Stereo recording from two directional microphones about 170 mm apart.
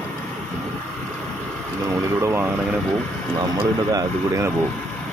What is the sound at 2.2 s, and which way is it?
Speech, 15° right (ahead or behind).